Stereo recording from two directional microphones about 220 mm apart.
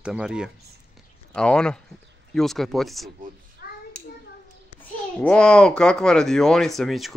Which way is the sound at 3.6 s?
45° left (ahead or behind).